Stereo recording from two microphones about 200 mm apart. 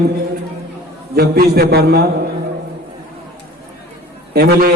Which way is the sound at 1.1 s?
50° right (ahead or behind).